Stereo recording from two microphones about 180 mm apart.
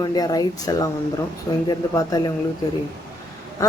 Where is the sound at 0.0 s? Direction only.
20° left (ahead or behind).